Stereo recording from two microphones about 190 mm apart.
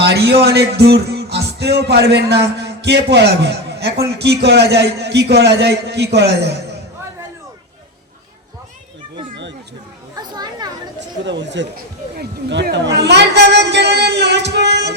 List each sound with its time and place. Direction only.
0.0 s music: 60° right (ahead or behind)
4.2 s a man's voice: 65° right (ahead or behind)
9.3 s a sound: 70° right (ahead or behind)
10.2 s children playing: 20° right (ahead or behind)
11.3 s speech: 70° right (ahead or behind)
12.1 s chatter: 60° right (ahead or behind)